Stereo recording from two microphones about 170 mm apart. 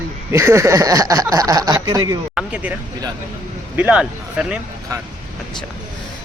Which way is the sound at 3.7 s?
5° right (ahead or behind).